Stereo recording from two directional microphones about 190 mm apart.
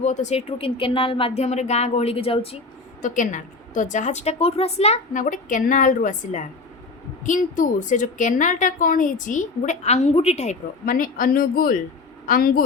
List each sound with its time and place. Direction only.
0.0 s a woman's voice: 40° left (ahead or behind)
3.0 s a woman's voice: 40° left (ahead or behind)